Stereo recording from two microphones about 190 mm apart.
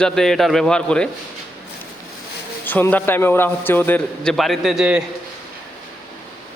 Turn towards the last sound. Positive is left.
turn(degrees=-5)  # may be behind; listen again after turning